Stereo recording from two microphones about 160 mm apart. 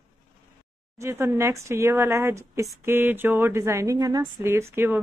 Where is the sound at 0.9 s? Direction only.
15° right (ahead or behind).